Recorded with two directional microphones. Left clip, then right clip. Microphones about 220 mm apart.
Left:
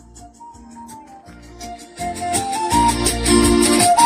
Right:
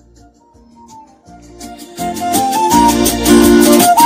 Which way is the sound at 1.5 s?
55° right (ahead or behind).